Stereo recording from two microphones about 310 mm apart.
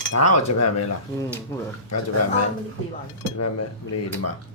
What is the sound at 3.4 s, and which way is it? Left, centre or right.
Speech, left.